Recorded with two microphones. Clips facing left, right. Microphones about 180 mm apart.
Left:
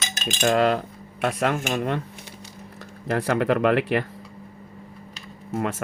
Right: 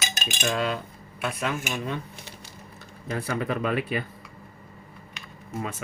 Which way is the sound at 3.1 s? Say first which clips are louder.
Left 7 dB; 75° left (ahead or behind).